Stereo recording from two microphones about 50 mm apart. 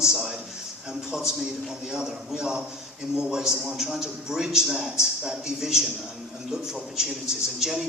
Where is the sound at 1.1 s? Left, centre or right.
Centre.